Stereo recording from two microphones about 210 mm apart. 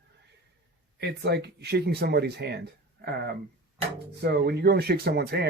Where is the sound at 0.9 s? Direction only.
50° right (ahead or behind).